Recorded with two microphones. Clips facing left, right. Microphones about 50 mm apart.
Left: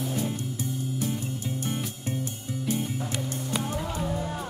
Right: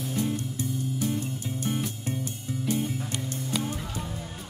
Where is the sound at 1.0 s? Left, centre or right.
Centre.